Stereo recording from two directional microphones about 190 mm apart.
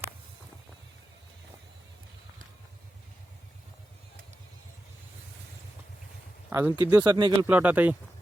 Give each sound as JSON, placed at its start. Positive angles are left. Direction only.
{"t": 6.5, "sound": "speech", "side_deg": -15}
{"t": 7.4, "sound": "speech", "side_deg": -10}